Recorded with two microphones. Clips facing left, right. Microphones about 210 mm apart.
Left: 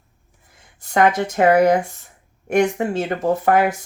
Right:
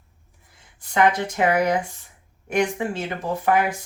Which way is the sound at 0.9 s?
45° left (ahead or behind).